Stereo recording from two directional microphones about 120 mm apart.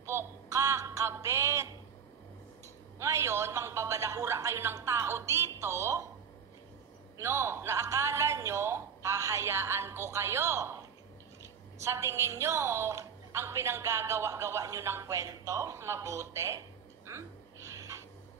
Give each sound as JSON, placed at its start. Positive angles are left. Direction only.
{"t": 0.0, "sound": "a sound", "side_deg": -25}
{"t": 3.0, "sound": "a man's voice", "side_deg": -25}
{"t": 7.2, "sound": "a man's voice", "side_deg": -20}
{"t": 11.8, "sound": "a woman's voice", "side_deg": -25}